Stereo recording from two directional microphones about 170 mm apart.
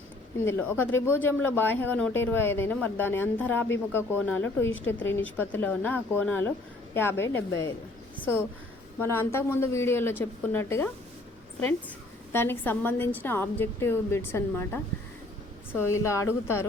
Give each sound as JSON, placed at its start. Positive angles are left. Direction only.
{"t": 0.4, "sound": "speech", "side_deg": 15}
{"t": 9.0, "sound": "speech", "side_deg": 15}
{"t": 12.3, "sound": "speech", "side_deg": 15}